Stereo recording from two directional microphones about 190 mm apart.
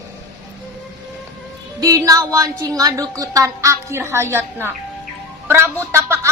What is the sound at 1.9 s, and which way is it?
A woman's voice, 15° right (ahead or behind).